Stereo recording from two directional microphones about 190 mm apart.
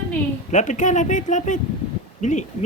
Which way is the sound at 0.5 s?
40° left (ahead or behind).